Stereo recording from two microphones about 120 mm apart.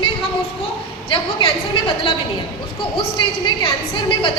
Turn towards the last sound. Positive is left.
turn(degrees=45)  # may be behind; listen again after turning